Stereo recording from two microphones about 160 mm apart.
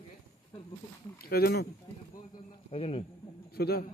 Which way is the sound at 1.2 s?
75° left (ahead or behind).